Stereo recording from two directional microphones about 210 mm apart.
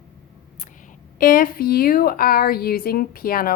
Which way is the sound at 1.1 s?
40° left (ahead or behind).